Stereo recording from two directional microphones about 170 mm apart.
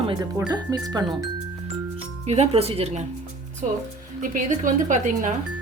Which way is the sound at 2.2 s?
40° right (ahead or behind).